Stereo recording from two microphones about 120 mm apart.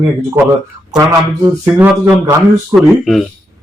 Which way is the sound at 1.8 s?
10° right (ahead or behind).